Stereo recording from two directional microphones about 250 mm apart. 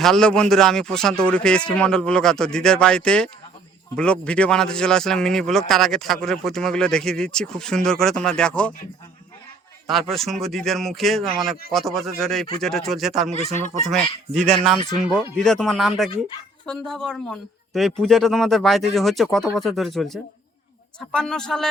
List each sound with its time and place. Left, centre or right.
0.0 s speech: centre
9.8 s speech: centre
13.4 s speech: right
14.3 s speech: centre